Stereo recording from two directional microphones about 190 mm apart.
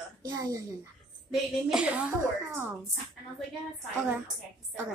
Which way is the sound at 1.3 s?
Centre (ahead or behind).